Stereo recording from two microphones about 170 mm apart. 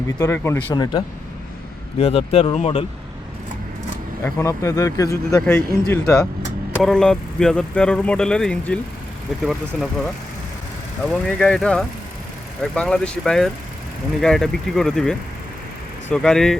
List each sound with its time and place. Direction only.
0.2 s speech: 15° left (ahead or behind)
2.0 s speech: 35° left (ahead or behind)
4.2 s speech: 15° left (ahead or behind); by 10.1 s centre (ahead or behind)
11.1 s speech: 5° left (ahead or behind)